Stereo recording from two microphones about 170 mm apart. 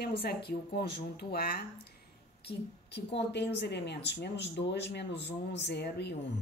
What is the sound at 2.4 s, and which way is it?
A woman's voice, 85° left.